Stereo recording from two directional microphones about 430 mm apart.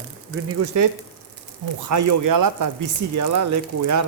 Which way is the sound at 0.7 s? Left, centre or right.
Right.